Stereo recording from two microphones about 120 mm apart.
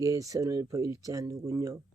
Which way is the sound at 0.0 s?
30° right (ahead or behind).